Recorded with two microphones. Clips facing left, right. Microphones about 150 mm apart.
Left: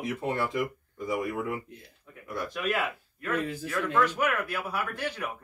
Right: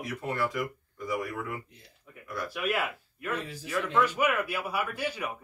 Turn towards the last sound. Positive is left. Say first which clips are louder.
# even
turn(degrees=-10)  # may be behind; listen again after turning